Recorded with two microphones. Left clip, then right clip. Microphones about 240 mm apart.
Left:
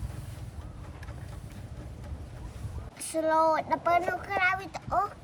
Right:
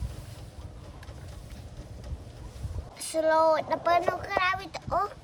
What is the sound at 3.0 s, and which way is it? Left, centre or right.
Speech, centre.